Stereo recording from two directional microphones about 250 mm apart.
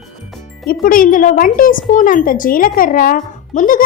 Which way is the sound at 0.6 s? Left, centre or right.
Left.